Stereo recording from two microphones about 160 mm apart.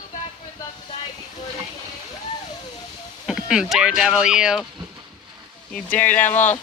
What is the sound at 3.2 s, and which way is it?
Speech, 5° right (ahead or behind).